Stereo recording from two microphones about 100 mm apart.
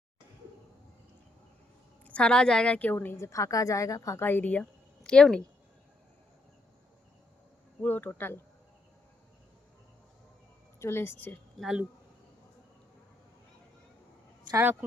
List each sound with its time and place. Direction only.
2.0 s a woman's voice: 10° left (ahead or behind); by 4.3 s 35° left (ahead or behind)
4.3 s speech: 15° left (ahead or behind)
4.6 s a sound: 5° left (ahead or behind)
7.8 s a woman's voice: 20° left (ahead or behind)
10.8 s a woman's voice: 25° left (ahead or behind)
14.5 s speech: 20° right (ahead or behind)